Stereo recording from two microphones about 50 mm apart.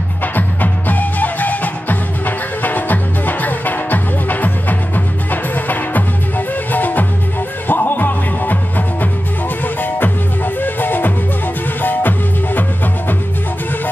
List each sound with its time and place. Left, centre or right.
0.2 s music: left